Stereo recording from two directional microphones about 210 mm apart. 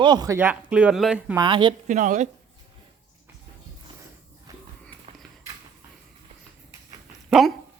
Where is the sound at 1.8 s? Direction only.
35° right (ahead or behind).